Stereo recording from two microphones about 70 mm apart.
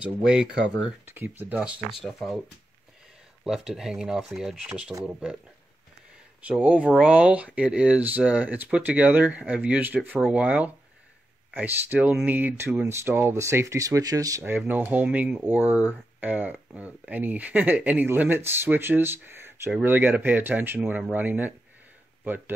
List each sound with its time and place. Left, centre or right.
0.0 s speech: centre
1.0 s speech: right
1.6 s speech: centre
2.0 s speech: centre
3.4 s speech: centre
6.4 s speech: centre
13.3 s speech: right
14.7 s speech: right